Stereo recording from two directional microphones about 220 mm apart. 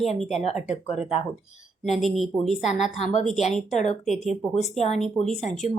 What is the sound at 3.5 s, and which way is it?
Speech, 30° left (ahead or behind).